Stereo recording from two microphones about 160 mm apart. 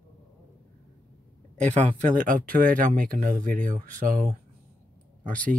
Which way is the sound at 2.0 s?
55° right (ahead or behind).